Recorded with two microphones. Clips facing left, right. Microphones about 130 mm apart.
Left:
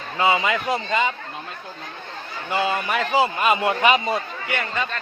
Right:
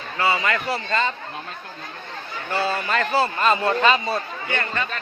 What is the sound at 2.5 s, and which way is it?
A man's voice, 15° left (ahead or behind).